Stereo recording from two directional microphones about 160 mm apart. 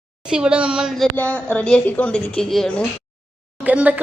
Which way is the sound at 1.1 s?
10° left (ahead or behind).